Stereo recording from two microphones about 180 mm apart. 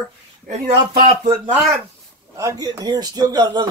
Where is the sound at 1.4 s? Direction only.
10° right (ahead or behind).